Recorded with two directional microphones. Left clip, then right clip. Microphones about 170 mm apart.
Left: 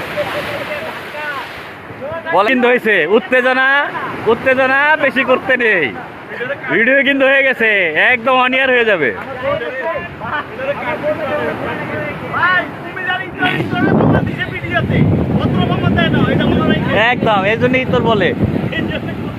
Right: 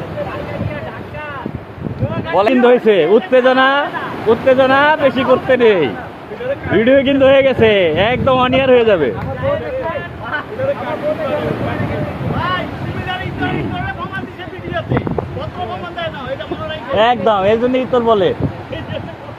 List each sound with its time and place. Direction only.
2.3 s speech: centre (ahead or behind)
12.4 s vehicle: 20° left (ahead or behind)
16.9 s speech: 10° left (ahead or behind)